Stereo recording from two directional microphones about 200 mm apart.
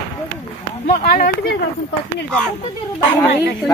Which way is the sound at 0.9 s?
50° left (ahead or behind).